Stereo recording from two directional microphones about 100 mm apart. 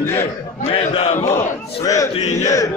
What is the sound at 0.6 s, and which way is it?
Speech, 75° left (ahead or behind).